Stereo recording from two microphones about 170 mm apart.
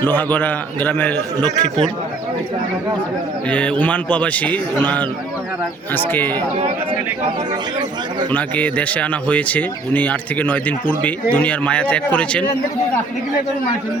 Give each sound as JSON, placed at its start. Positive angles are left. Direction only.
{"t": 0.0, "sound": "speech", "side_deg": 10}
{"t": 1.4, "sound": "a man's voice", "side_deg": -25}
{"t": 3.5, "sound": "speech", "side_deg": 5}
{"t": 5.9, "sound": "speech", "side_deg": 10}
{"t": 8.3, "sound": "speech", "side_deg": 10}